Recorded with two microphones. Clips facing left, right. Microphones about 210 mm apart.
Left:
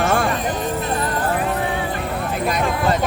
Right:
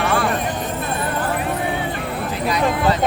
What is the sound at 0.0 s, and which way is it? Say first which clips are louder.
Clip-clop: left 1 dB; 45° left (ahead or behind).